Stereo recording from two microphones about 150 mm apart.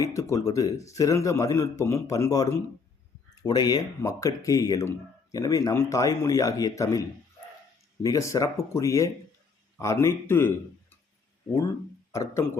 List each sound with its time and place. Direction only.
0.0 s speech: 20° left (ahead or behind)
8.0 s speech: 20° left (ahead or behind)
12.1 s speech: 20° left (ahead or behind)